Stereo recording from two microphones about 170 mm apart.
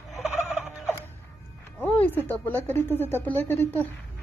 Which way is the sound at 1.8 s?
10° left (ahead or behind).